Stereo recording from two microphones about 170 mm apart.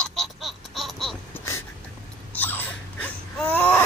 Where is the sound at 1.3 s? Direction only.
15° left (ahead or behind).